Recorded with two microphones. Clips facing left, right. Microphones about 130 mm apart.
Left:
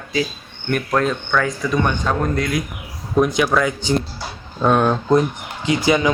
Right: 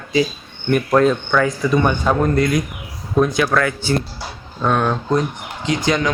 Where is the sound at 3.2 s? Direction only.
15° left (ahead or behind).